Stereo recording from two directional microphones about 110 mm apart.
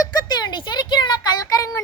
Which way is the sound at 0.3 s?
40° left (ahead or behind).